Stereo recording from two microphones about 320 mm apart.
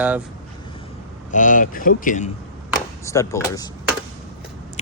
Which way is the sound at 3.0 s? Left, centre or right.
Centre.